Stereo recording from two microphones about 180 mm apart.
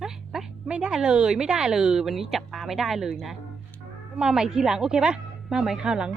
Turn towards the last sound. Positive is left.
turn(degrees=-5)  # may be behind; listen again after turning